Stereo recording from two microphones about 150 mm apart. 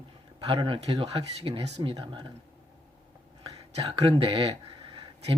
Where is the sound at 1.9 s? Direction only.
30° right (ahead or behind).